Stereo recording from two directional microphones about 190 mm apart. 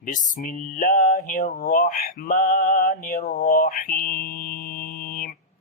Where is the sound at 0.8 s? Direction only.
40° left (ahead or behind).